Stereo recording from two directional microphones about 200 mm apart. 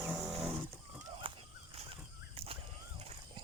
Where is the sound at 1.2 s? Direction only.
25° right (ahead or behind).